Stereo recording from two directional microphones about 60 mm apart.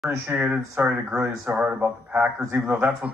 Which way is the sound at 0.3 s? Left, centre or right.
Right.